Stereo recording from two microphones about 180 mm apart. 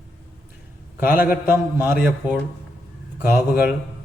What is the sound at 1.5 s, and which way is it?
Speech, 10° right (ahead or behind).